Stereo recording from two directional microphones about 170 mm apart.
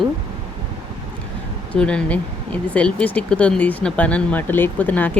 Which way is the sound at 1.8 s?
5° left (ahead or behind).